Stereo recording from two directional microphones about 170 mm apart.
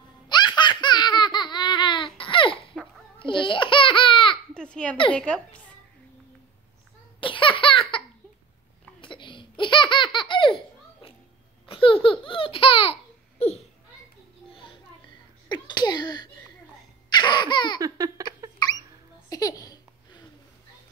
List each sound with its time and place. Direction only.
0.3 s laughter: 25° left (ahead or behind)
3.2 s babbling: 30° left (ahead or behind)
4.6 s a sound: 5° left (ahead or behind)
5.1 s a child's voice: 5° left (ahead or behind)
7.2 s baby laughter: 30° left (ahead or behind)
9.0 s laughter: 30° left (ahead or behind)
11.6 s baby laughter: 30° left (ahead or behind)
14.5 s music: 30° left (ahead or behind)
15.4 s a sound: 25° left (ahead or behind)
17.1 s laughter: 25° left (ahead or behind)
17.7 s laughter: 20° right (ahead or behind)
18.6 s hiccup: 25° left (ahead or behind)
19.2 s a sound: 20° left (ahead or behind)